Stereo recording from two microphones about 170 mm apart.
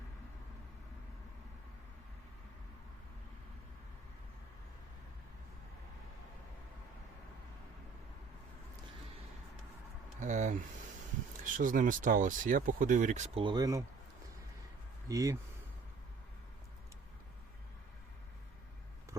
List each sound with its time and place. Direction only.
10.2 s speech: 45° right (ahead or behind); by 13.8 s 20° right (ahead or behind)
15.0 s speech: 20° right (ahead or behind)